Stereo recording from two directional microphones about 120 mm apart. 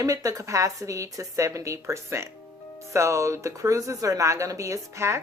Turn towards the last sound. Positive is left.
turn(degrees=-25)  # may be behind; listen again after turning